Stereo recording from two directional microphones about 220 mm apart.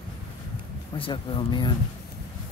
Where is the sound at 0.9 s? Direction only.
25° left (ahead or behind).